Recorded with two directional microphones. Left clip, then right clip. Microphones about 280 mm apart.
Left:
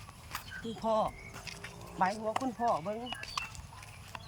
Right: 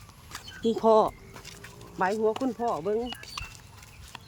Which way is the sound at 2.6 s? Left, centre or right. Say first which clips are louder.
Right 2 dB; right.